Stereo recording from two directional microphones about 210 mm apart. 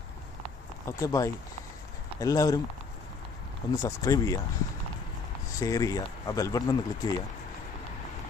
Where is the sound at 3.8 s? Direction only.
15° left (ahead or behind).